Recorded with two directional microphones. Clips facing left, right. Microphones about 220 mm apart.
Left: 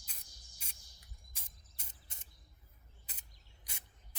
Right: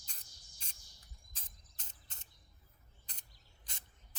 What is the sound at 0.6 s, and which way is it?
Bird, 10° left (ahead or behind).